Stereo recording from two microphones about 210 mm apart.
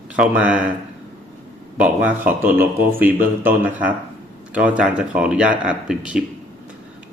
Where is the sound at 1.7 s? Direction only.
10° right (ahead or behind).